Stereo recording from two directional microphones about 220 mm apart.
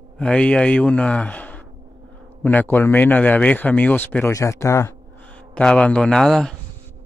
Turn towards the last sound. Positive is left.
turn(degrees=5)  # may be behind; listen again after turning